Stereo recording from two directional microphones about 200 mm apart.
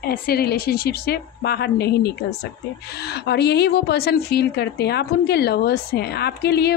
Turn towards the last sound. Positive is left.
turn(degrees=55)  # may be behind; listen again after turning